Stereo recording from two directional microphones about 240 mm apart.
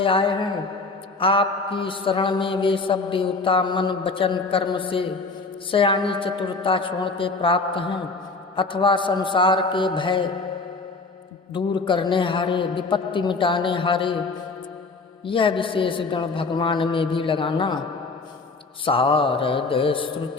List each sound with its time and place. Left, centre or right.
0.0 s mantra: left
11.5 s mantra: centre
15.3 s mantra: left
18.9 s mantra: left